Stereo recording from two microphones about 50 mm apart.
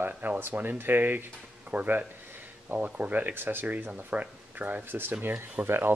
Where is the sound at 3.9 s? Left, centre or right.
Right.